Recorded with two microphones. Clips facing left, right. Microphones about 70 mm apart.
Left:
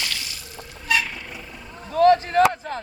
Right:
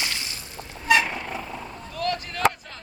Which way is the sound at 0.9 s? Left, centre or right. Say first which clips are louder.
Right 4 dB; right.